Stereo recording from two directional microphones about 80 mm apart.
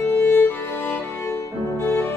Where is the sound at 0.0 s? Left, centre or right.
Left.